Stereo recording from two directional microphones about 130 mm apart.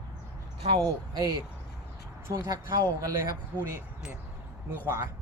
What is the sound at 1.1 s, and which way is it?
Speech, 30° right (ahead or behind).